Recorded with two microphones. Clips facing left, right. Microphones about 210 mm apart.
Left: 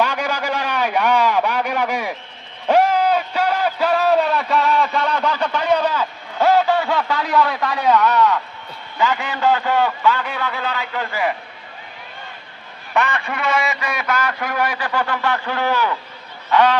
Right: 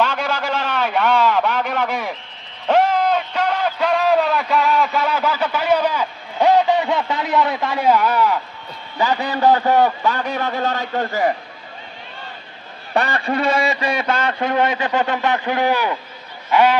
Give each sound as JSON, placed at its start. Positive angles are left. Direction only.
{"t": 0.0, "sound": "a sound", "side_deg": 15}
{"t": 9.0, "sound": "a man's voice", "side_deg": -35}
{"t": 12.9, "sound": "a man's voice", "side_deg": -35}
{"t": 16.5, "sound": "goose", "side_deg": -10}